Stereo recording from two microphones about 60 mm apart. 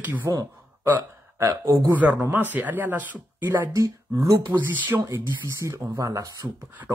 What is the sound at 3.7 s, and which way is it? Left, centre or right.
Speech, right.